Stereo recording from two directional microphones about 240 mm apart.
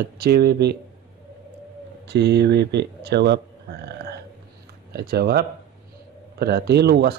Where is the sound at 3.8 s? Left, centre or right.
Right.